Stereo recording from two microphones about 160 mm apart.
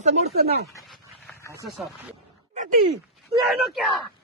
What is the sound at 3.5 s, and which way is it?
Speech, centre (ahead or behind).